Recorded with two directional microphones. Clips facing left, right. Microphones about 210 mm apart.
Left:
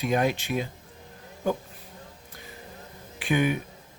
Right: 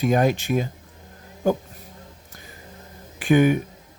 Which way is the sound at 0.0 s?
45° right (ahead or behind).